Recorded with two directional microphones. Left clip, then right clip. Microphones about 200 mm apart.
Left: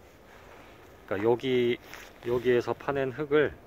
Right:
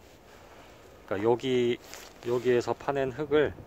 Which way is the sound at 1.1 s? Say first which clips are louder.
Even; centre (ahead or behind).